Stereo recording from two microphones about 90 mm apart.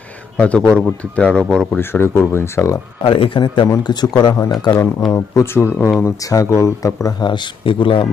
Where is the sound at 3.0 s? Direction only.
70° left (ahead or behind); by 4.3 s 50° left (ahead or behind).